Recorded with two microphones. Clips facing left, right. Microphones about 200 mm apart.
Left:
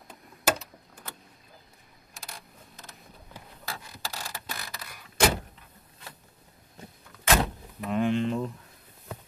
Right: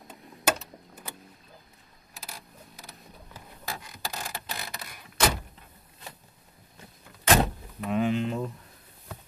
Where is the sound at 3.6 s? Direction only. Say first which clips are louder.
Right 2 dB; 20° right (ahead or behind).